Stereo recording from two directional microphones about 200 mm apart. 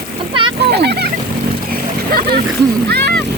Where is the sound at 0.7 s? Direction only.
55° right (ahead or behind).